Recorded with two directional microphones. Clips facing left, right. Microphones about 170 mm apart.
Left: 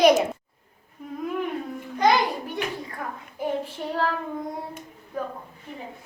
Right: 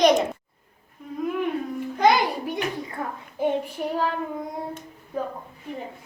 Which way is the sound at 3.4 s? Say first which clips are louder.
Right 4 dB; 25° right (ahead or behind).